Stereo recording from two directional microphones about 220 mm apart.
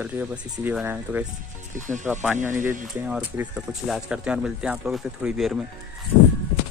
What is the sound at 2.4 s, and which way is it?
Speech, 35° right (ahead or behind).